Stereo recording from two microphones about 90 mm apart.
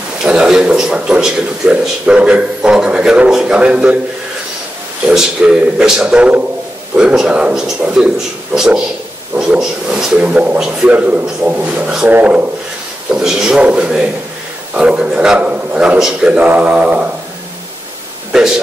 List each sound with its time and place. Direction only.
0.2 s a man's voice: 10° right (ahead or behind)
5.1 s a man's voice: 10° right (ahead or behind)
13.1 s a man's voice: 5° right (ahead or behind)